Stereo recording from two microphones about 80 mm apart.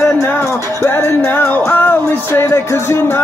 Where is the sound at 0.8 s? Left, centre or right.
Left.